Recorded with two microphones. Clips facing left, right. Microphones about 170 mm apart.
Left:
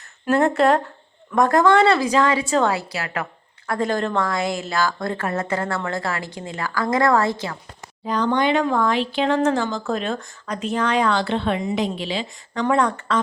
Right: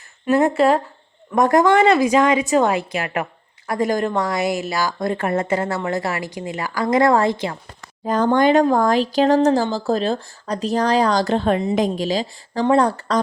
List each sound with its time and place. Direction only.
0.3 s speech: 10° right (ahead or behind)
1.4 s a woman's voice: 15° right (ahead or behind)
8.0 s speech: 45° right (ahead or behind)